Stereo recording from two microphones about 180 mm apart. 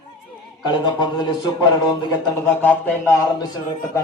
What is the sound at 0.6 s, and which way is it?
Speech, 25° left (ahead or behind).